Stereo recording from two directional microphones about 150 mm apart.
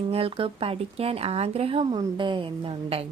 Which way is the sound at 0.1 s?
40° right (ahead or behind).